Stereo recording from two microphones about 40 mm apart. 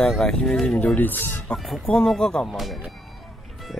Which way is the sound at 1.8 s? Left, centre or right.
Left.